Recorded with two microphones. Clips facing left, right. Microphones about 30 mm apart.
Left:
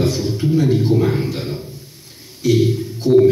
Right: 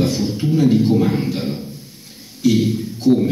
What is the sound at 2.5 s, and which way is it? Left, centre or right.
Speech, centre.